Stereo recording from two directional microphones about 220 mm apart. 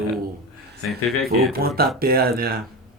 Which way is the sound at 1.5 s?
45° right (ahead or behind).